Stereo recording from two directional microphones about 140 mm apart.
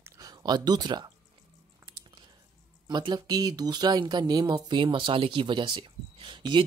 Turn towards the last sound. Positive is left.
turn(degrees=-35)  # may be behind; listen again after turning